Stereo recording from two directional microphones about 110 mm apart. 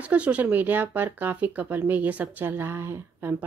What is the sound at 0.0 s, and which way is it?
A woman's voice, 10° right (ahead or behind).